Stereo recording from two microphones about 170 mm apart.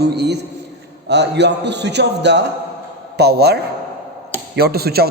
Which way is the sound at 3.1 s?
75° right (ahead or behind).